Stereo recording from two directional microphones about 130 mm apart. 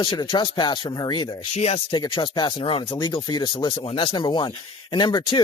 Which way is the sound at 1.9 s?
35° left (ahead or behind).